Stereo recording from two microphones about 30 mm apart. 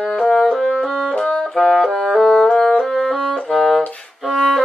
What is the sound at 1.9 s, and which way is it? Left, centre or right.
Music, left.